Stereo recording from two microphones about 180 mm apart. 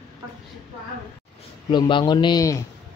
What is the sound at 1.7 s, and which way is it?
Speech, 25° left (ahead or behind).